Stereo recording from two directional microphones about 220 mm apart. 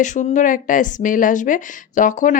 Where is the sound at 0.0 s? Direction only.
35° left (ahead or behind).